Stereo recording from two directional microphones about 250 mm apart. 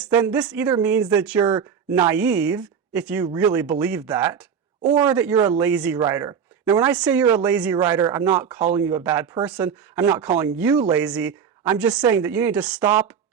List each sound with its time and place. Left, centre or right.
0.0 s speech: centre
1.5 s speech: centre
2.0 s speech: centre